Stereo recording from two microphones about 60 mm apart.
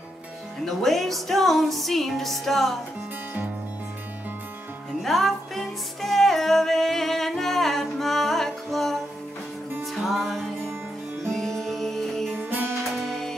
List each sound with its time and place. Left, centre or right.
0.7 s music: centre
5.0 s music: centre
12.4 s music: right
13.0 s music: centre